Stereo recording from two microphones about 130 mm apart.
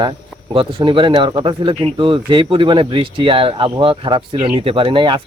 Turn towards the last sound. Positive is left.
turn(degrees=-40)  # may be behind; listen again after turning